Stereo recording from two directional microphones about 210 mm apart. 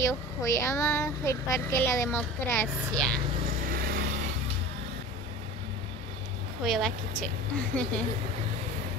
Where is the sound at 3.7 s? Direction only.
45° right (ahead or behind).